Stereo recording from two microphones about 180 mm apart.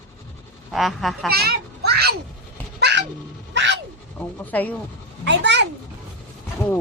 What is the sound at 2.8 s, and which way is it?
Dog, 70° right (ahead or behind).